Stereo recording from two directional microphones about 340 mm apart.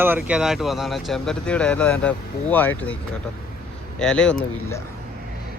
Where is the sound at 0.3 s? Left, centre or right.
Centre.